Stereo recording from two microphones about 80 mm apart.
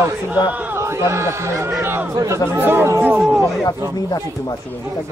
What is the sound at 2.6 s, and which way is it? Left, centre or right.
Speech, right.